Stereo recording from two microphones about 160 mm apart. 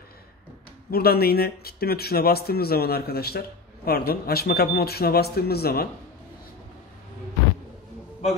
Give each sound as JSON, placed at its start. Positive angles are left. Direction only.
{"t": 0.8, "sound": "speech", "side_deg": 75}